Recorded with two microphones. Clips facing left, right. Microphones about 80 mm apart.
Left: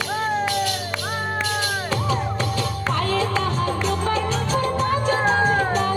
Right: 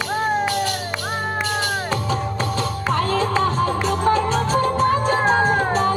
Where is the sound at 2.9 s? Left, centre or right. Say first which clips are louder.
Right 3 dB; right.